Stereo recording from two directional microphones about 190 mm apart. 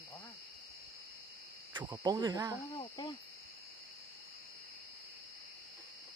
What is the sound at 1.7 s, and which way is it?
Speech, 20° right (ahead or behind).